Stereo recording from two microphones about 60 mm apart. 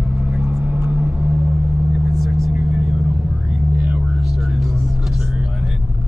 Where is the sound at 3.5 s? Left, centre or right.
Right.